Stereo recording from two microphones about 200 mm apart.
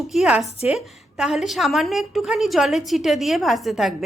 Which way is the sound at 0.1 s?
5° right (ahead or behind).